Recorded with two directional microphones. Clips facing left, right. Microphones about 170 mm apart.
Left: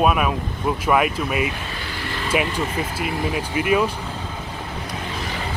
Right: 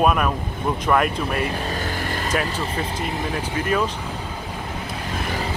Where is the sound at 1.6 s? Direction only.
45° right (ahead or behind).